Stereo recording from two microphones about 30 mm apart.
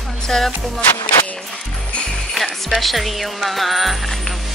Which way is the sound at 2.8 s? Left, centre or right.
Centre.